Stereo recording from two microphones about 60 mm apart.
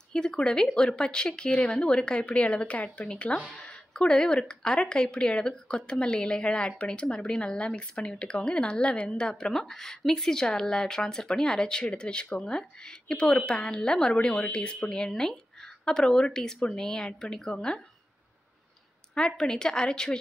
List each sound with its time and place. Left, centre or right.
0.1 s speech: centre
19.1 s speech: centre